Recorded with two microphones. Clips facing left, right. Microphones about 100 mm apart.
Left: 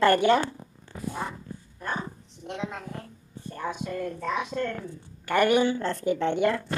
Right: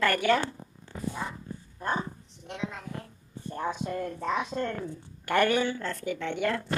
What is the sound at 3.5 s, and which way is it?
Speech, 30° right (ahead or behind).